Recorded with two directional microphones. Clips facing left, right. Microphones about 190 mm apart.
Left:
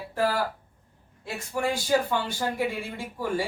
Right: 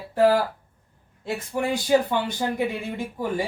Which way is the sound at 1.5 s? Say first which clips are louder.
Right 3 dB; 20° right (ahead or behind).